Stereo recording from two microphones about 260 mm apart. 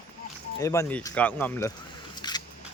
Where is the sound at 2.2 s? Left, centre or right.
Centre.